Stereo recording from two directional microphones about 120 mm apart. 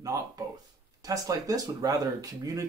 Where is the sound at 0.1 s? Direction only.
30° right (ahead or behind).